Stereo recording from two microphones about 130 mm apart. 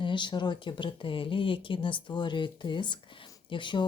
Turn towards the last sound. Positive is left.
turn(degrees=40)  # may be behind; listen again after turning